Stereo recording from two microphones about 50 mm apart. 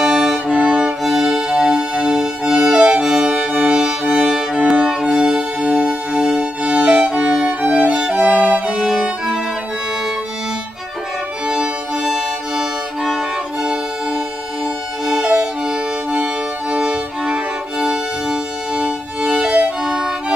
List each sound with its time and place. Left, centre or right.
0.0 s music: centre
0.5 s music: centre
7.4 s music: right
7.9 s music: centre
8.2 s music: right
8.6 s music: centre
11.4 s music: centre
19.8 s music: centre